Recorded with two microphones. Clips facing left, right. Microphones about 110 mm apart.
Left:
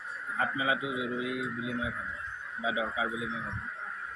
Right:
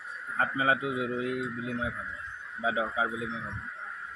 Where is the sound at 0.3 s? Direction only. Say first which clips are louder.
Right 3 dB; 45° right (ahead or behind).